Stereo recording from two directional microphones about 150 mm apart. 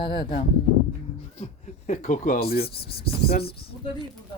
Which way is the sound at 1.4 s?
50° left (ahead or behind).